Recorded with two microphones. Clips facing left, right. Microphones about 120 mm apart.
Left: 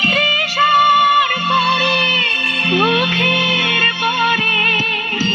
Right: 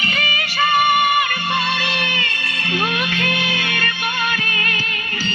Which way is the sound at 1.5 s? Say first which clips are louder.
Left 6 dB; 75° left (ahead or behind).